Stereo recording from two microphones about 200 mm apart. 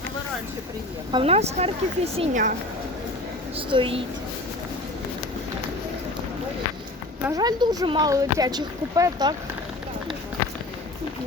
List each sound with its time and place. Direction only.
1.1 s speech: 30° right (ahead or behind)
3.7 s speech: 25° right (ahead or behind)
7.3 s speech: 20° right (ahead or behind)